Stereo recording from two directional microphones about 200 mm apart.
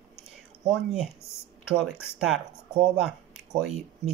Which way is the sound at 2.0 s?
5° right (ahead or behind).